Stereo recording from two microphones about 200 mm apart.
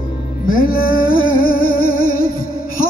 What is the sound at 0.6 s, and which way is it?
Music, 45° left (ahead or behind).